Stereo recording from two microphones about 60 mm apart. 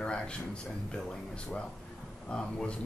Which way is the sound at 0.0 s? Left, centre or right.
Centre.